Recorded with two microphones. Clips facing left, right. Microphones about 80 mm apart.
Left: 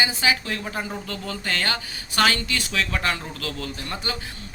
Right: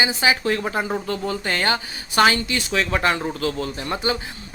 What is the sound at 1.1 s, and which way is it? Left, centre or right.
Speech, right.